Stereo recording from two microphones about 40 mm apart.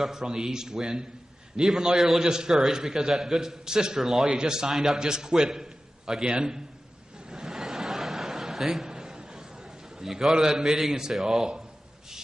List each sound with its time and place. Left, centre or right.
0.0 s a man's voice: centre
2.2 s a man's voice: centre
2.5 s a man's voice: centre
7.2 s chuckle: centre
8.8 s a sound: centre
10.0 s a man's voice: centre